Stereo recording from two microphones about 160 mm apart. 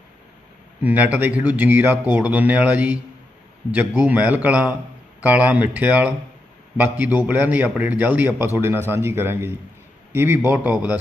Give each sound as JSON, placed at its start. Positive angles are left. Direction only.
{"t": 0.8, "sound": "speech", "side_deg": -10}